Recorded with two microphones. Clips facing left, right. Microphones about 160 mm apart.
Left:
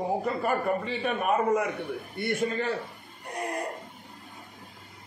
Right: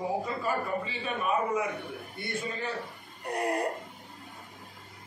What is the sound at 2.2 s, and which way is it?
Speech, 75° left (ahead or behind).